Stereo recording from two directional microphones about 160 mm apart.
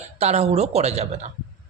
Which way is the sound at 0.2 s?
40° right (ahead or behind).